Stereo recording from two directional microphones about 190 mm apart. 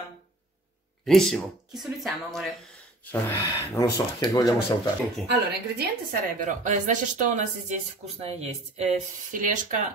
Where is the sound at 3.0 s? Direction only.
10° left (ahead or behind).